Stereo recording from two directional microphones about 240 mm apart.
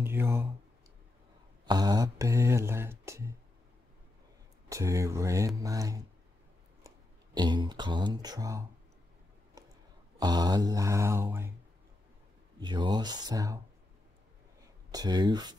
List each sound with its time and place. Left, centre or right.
0.0 s speech: centre
1.7 s speech: centre
4.6 s speech: centre
6.8 s a sound: centre
7.3 s speech: centre
9.6 s a sound: centre
10.1 s speech: centre
12.5 s speech: centre
14.9 s speech: centre